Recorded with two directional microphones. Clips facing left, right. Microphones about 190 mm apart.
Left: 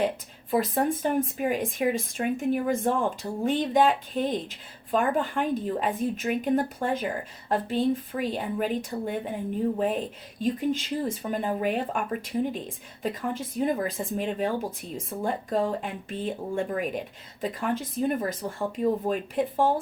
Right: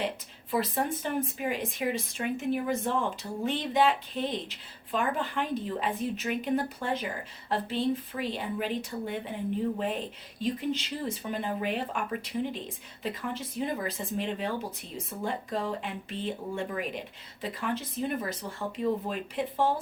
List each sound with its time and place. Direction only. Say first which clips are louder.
0.5 s speech: left 5 dB; 45° left (ahead or behind)